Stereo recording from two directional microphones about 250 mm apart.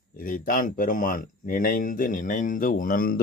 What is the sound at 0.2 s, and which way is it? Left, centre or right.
Speech, left.